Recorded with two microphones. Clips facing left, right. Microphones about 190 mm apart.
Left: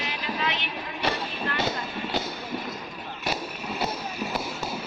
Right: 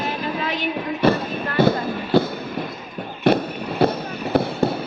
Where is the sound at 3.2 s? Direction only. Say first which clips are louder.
Right 13 dB; 60° right (ahead or behind).